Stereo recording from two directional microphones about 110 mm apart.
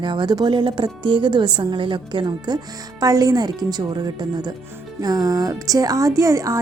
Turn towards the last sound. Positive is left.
turn(degrees=-30)  # may be behind; listen again after turning